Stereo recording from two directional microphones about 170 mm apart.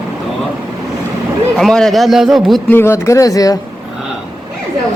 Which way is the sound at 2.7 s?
15° left (ahead or behind).